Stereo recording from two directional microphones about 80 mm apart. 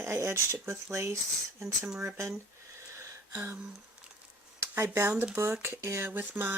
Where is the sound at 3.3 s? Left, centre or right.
Right.